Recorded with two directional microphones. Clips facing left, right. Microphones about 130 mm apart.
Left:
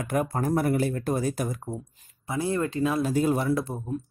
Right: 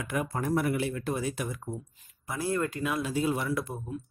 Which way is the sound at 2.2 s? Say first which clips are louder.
Left 3 dB; 25° left (ahead or behind).